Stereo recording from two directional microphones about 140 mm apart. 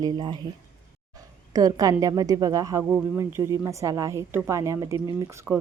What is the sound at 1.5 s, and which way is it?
A woman's voice, 25° right (ahead or behind).